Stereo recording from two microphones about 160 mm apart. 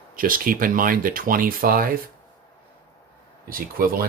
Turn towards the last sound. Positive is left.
turn(degrees=-65)  # may be behind; listen again after turning